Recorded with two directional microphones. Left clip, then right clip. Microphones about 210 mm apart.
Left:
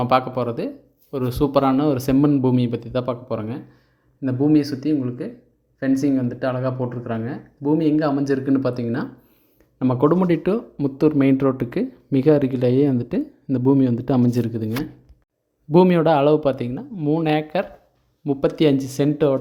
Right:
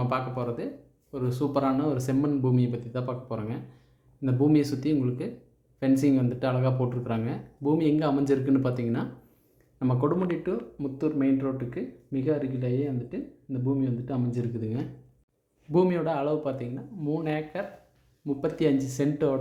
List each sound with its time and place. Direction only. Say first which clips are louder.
0.0 s speech: left 11 dB; 45° left (ahead or behind)
4.2 s speech: left 5 dB; 20° left (ahead or behind); by 14.7 s 45° left (ahead or behind)
15.7 s speech: left 10 dB; 40° left (ahead or behind)